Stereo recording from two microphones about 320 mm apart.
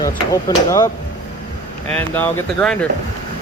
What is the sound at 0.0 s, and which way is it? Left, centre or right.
Speech, centre.